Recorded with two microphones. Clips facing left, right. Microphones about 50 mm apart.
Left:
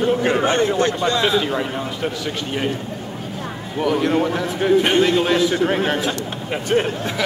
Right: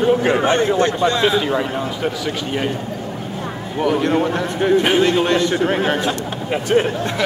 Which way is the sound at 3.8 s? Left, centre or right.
Centre.